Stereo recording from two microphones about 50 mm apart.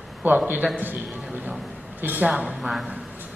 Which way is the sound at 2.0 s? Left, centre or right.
Right.